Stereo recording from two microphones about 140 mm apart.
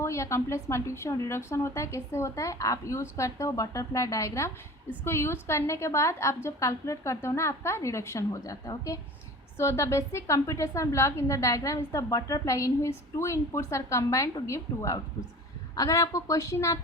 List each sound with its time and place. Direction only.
0.0 s a woman's voice: 20° left (ahead or behind)